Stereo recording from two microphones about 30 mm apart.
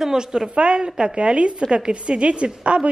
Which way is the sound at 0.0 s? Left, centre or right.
Centre.